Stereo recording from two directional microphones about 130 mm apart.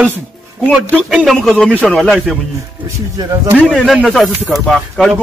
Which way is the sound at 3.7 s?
Centre (ahead or behind).